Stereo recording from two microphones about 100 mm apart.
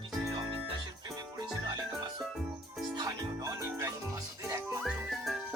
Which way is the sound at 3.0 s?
35° right (ahead or behind).